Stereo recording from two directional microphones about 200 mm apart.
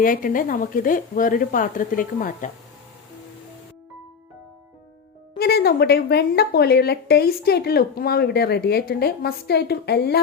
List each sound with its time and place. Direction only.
0.0 s a woman's voice: 45° left (ahead or behind)
5.4 s a woman's voice: 50° left (ahead or behind)